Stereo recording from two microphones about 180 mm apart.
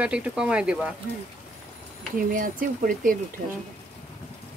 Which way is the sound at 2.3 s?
50° right (ahead or behind).